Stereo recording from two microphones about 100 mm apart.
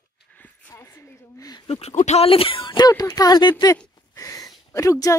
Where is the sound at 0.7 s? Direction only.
25° left (ahead or behind).